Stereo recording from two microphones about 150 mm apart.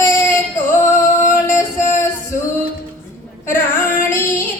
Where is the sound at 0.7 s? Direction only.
15° left (ahead or behind).